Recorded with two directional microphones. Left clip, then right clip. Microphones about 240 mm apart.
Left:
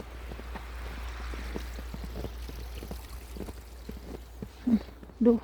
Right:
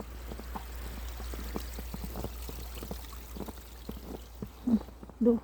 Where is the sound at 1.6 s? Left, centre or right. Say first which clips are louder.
Even; right.